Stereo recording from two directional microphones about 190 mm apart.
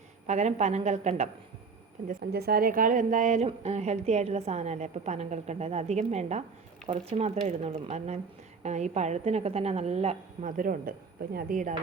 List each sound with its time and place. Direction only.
0.3 s a woman's voice: 35° right (ahead or behind)
2.0 s a woman's voice: 55° right (ahead or behind)